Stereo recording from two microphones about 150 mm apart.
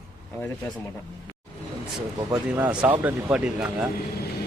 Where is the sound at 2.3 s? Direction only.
10° right (ahead or behind).